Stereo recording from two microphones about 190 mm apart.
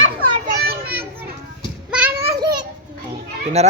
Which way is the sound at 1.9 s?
10° right (ahead or behind).